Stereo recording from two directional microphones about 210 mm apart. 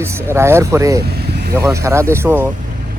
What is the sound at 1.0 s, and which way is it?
Vehicle, 50° right (ahead or behind).